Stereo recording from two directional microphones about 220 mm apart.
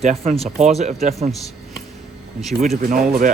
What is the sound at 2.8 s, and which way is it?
Speech, 40° right (ahead or behind).